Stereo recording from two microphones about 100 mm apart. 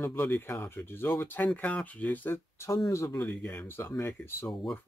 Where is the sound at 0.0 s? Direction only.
25° left (ahead or behind).